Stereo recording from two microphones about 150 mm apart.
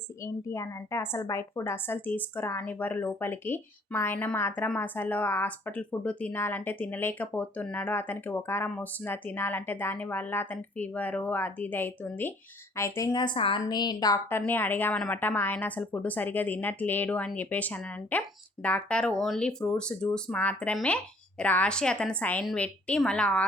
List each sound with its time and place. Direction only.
0.4 s a woman's voice: 20° left (ahead or behind)
14.3 s a woman's voice: 15° left (ahead or behind)